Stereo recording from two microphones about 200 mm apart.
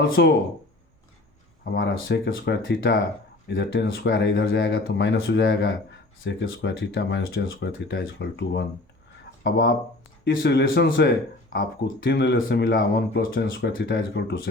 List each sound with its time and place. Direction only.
0.2 s speech: 55° left (ahead or behind)
1.7 s speech: 60° left (ahead or behind)